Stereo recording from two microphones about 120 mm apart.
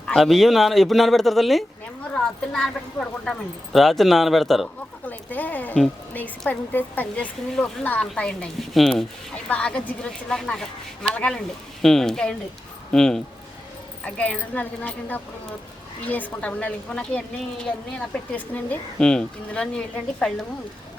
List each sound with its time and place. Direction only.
0.1 s speech: centre (ahead or behind)
5.0 s a woman's voice: 15° left (ahead or behind)